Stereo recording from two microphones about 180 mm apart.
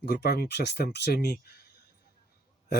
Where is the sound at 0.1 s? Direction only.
60° left (ahead or behind).